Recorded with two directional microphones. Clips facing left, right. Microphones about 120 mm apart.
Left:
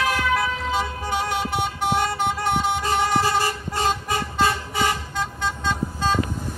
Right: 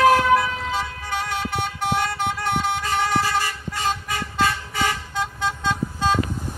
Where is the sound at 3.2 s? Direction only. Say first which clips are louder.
Left 2 dB; 30° left (ahead or behind).